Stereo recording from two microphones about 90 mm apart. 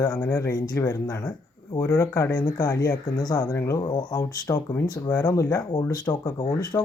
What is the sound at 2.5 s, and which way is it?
Speech, 35° left (ahead or behind).